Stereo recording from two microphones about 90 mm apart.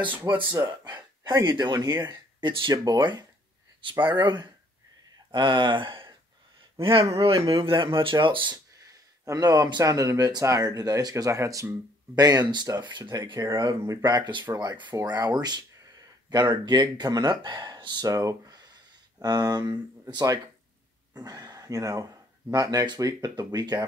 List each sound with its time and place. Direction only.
0.3 s speech: 50° right (ahead or behind)
2.0 s speech: 60° right (ahead or behind)
6.8 s speech: 85° right; by 8.5 s 65° right (ahead or behind)
8.8 s speech: 40° right (ahead or behind)
12.2 s speech: 45° right (ahead or behind)
13.4 s speech: 45° right (ahead or behind)
18.0 s speech: 40° right (ahead or behind)